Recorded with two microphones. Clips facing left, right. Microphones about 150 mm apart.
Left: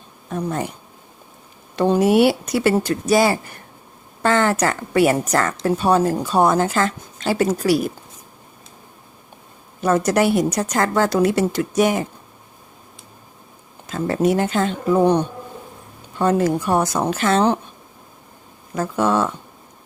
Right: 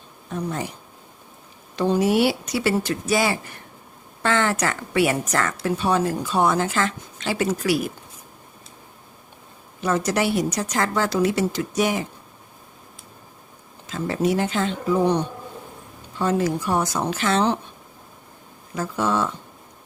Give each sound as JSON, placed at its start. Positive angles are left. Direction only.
{"t": 0.3, "sound": "speech", "side_deg": 50}
{"t": 1.7, "sound": "a woman's voice", "side_deg": 55}
{"t": 9.8, "sound": "a woman's voice", "side_deg": 50}
{"t": 13.8, "sound": "a woman's voice", "side_deg": 50}
{"t": 18.7, "sound": "a woman's voice", "side_deg": 50}